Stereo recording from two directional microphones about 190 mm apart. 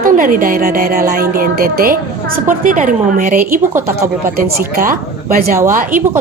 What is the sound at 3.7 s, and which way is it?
Speech, 15° right (ahead or behind).